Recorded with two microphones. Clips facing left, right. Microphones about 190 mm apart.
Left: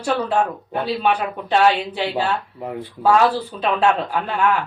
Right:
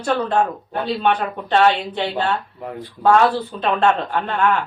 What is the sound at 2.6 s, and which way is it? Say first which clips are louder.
Speech: left 2 dB; 20° left (ahead or behind).